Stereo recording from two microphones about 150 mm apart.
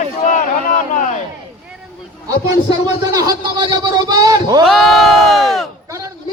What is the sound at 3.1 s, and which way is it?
A man's voice, 25° right (ahead or behind).